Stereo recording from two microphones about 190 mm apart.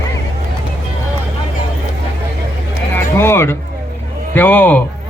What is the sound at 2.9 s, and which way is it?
A man's voice, 10° left (ahead or behind).